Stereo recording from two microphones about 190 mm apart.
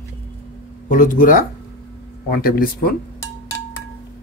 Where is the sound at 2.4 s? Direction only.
50° left (ahead or behind).